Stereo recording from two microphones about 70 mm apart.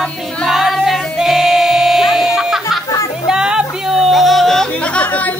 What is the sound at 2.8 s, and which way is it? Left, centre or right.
Music, left.